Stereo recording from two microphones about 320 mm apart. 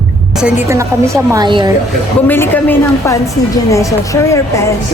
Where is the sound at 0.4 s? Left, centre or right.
Centre.